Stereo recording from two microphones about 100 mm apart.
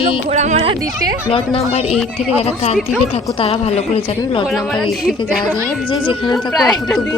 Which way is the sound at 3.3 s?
70° left (ahead or behind).